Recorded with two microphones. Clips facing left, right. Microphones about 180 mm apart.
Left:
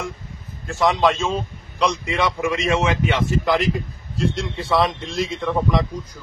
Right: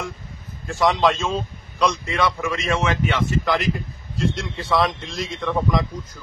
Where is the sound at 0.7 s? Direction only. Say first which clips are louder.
Left 1 dB; 5° left (ahead or behind).